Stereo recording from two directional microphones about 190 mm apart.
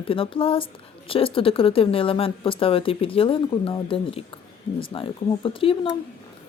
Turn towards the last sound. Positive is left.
turn(degrees=30)  # may be behind; listen again after turning